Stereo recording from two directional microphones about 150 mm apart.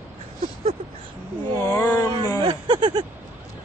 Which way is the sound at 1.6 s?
20° left (ahead or behind).